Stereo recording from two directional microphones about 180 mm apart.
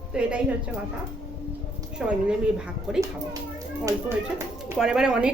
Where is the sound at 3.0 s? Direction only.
20° right (ahead or behind).